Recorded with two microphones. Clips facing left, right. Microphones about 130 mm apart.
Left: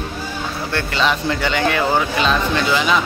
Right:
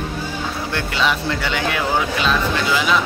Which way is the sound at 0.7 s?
5° right (ahead or behind).